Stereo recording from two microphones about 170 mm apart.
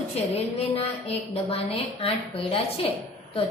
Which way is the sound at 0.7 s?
35° left (ahead or behind).